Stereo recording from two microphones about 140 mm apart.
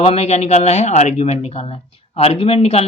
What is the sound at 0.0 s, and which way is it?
Speech, 45° left (ahead or behind).